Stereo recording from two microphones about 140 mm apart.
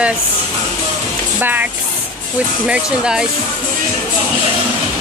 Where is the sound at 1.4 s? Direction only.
10° right (ahead or behind).